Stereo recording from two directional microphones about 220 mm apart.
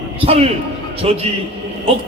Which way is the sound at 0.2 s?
25° right (ahead or behind).